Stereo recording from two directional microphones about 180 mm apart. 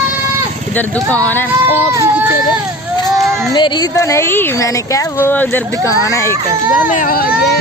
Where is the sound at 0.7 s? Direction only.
10° left (ahead or behind).